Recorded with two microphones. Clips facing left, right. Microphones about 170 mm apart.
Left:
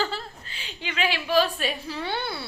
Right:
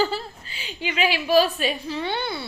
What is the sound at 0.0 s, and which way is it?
Speech, 5° right (ahead or behind).